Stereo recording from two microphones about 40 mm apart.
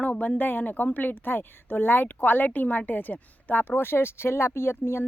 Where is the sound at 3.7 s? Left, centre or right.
Left.